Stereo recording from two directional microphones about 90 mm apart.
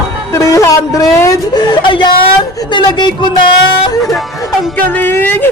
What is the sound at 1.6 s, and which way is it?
Speech, 60° left (ahead or behind).